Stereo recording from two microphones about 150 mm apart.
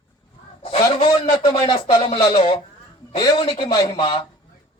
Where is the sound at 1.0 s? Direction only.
35° left (ahead or behind).